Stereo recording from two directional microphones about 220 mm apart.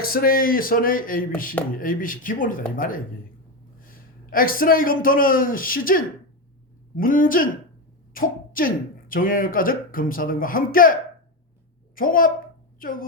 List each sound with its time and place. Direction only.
0.0 s a man's voice: 40° left (ahead or behind)
11.9 s speech: 40° left (ahead or behind)